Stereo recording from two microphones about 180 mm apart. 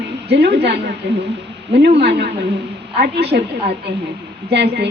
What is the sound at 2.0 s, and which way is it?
A woman's voice, 65° right (ahead or behind).